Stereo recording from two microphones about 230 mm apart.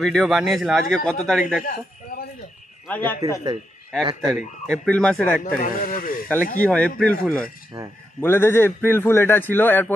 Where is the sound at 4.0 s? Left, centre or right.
Centre.